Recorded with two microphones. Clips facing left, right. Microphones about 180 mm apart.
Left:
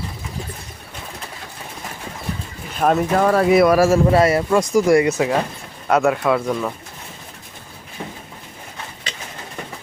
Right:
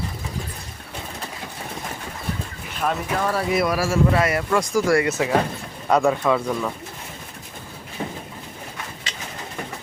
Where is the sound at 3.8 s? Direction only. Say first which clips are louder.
Left 6 dB; 40° left (ahead or behind); by 5.2 s 15° left (ahead or behind).